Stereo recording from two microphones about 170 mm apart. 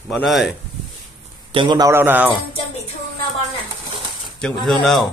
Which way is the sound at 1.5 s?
30° right (ahead or behind).